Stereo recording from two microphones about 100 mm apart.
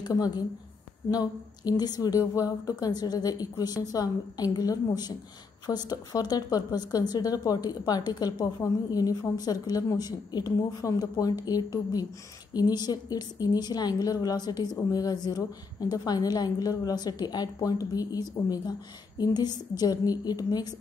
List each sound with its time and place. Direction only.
0.0 s a woman's voice: 40° left (ahead or behind)